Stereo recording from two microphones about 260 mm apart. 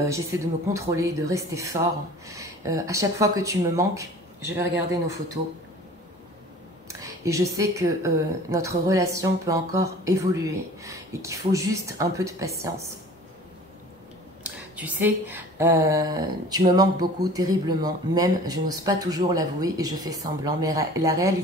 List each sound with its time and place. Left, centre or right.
0.0 s a woman's voice: centre
6.9 s a woman's voice: centre
14.4 s a woman's voice: centre